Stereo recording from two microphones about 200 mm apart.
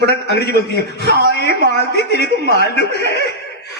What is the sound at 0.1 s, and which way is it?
A man's voice, 55° left (ahead or behind).